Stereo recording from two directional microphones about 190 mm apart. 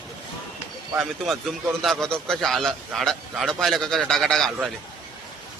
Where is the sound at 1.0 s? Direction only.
Centre (ahead or behind).